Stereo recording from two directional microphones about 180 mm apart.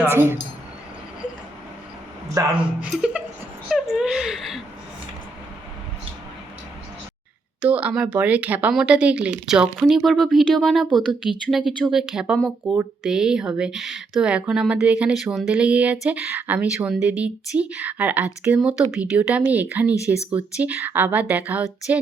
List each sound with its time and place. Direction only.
0.0 s speech: 15° right (ahead or behind)
2.4 s speech: 20° right (ahead or behind)
2.8 s speech: 5° right (ahead or behind)
7.6 s speech: 5° right (ahead or behind)